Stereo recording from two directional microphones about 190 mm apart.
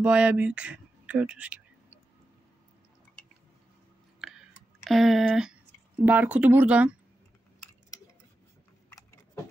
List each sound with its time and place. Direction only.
0.0 s speech: 5° right (ahead or behind)
4.2 s a sound: centre (ahead or behind)
4.8 s speech: centre (ahead or behind)
8.9 s keys jangling: 15° left (ahead or behind)